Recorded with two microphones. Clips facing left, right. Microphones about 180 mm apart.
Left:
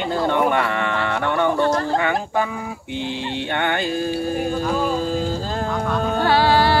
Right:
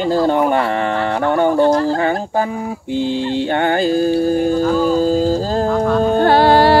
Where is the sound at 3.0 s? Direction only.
35° right (ahead or behind).